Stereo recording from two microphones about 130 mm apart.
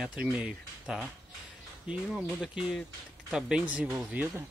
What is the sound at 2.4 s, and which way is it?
Speech, 5° right (ahead or behind).